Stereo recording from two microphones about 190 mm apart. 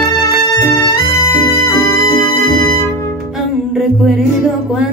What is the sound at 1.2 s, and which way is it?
Music, 15° left (ahead or behind).